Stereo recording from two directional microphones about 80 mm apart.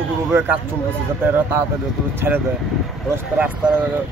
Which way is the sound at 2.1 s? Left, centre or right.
Right.